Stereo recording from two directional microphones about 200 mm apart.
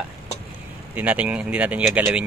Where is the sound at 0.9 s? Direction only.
5° right (ahead or behind).